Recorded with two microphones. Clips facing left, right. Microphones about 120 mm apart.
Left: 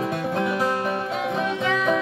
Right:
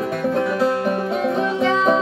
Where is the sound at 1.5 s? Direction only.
35° right (ahead or behind).